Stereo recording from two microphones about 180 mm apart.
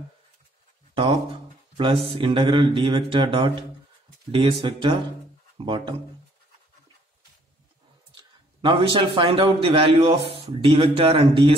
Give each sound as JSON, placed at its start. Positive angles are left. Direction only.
{"t": 1.8, "sound": "speech", "side_deg": -30}
{"t": 8.1, "sound": "a man's voice", "side_deg": -25}